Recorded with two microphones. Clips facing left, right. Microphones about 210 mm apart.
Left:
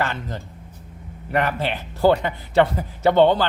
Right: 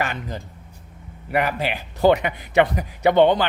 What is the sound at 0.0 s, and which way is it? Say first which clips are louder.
Speech: left 1 dB; 15° right (ahead or behind).